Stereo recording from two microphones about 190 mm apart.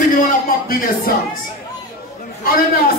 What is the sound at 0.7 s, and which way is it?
Speech, 50° left (ahead or behind).